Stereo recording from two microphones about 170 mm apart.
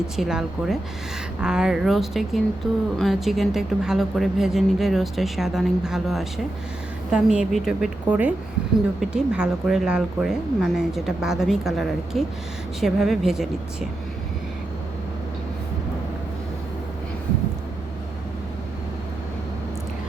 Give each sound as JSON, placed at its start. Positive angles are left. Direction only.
{"t": 0.2, "sound": "a woman's voice", "side_deg": -5}